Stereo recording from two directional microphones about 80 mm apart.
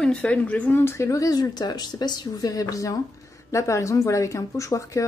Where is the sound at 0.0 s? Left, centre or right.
Centre.